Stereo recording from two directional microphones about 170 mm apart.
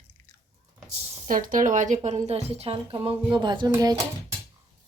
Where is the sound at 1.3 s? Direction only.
55° right (ahead or behind); by 4.3 s 20° right (ahead or behind).